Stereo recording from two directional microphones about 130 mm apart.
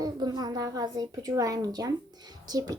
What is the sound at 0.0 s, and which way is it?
A woman's voice, 30° right (ahead or behind).